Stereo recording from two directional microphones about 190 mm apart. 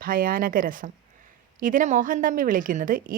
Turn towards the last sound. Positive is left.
turn(degrees=-45)  # may be behind; listen again after turning